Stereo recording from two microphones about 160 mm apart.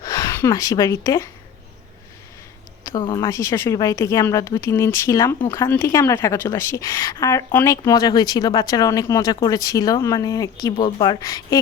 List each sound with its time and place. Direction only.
0.0 s speech: 20° left (ahead or behind)
2.8 s a woman's voice: 30° left (ahead or behind)